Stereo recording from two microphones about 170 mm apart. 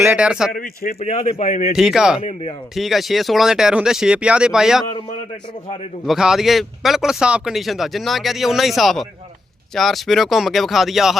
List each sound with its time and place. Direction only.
0.0 s a man's voice: 10° right (ahead or behind)
0.5 s speech: 55° left (ahead or behind)
0.9 s speech: 35° left (ahead or behind)
1.7 s speech: 5° right (ahead or behind)
6.1 s speech: centre (ahead or behind)